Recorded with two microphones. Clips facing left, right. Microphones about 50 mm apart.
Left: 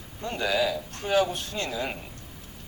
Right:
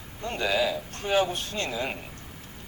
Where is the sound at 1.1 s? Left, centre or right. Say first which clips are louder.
Left 1 dB; right.